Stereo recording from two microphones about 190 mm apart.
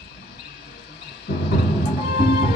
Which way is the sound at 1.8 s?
60° left (ahead or behind).